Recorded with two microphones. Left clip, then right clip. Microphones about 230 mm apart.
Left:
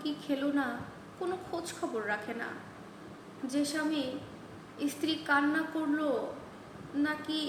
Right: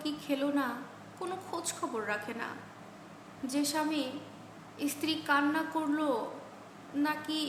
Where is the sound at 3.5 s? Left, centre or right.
Centre.